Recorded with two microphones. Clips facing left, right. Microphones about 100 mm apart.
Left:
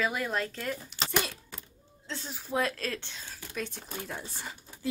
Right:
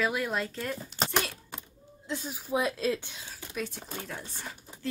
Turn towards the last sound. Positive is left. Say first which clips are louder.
# left 1 dB
turn(degrees=5)  # may be behind; listen again after turning